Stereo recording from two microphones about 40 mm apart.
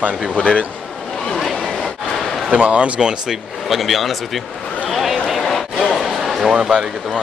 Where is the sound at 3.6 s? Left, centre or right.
Centre.